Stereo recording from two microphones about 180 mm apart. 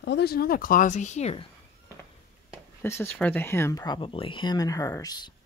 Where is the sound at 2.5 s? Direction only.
15° left (ahead or behind).